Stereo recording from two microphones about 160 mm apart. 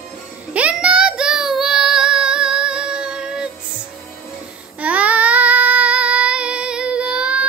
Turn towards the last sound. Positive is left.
turn(degrees=-5)  # may be behind; listen again after turning